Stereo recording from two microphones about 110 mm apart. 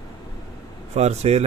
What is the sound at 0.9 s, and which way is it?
Speech, 85° right.